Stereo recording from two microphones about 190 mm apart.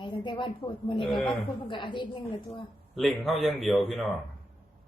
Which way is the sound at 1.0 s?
Centre (ahead or behind).